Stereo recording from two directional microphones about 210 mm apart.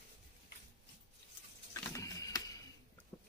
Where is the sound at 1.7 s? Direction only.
15° left (ahead or behind).